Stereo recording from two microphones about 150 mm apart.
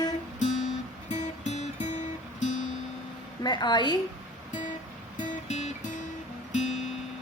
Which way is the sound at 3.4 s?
30° left (ahead or behind).